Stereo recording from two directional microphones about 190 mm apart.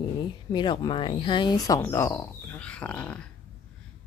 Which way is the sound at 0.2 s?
25° left (ahead or behind).